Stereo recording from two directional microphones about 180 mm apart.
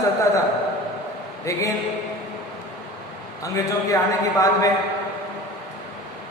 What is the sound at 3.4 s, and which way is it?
A man's voice, 20° left (ahead or behind).